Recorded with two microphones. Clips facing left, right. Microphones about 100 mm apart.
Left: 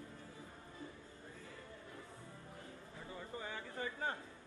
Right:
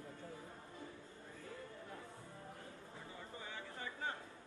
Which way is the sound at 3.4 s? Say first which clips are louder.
Left 4 dB; 45° left (ahead or behind).